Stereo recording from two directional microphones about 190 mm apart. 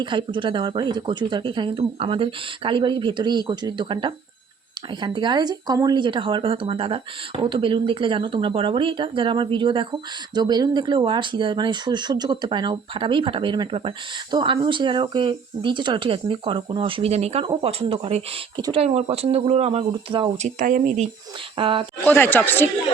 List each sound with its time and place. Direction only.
0.0 s speech: 25° right (ahead or behind)
21.5 s speech: 30° right (ahead or behind)
22.0 s speech: 10° left (ahead or behind)